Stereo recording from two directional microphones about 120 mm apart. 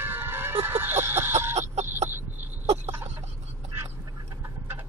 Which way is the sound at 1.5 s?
70° right (ahead or behind).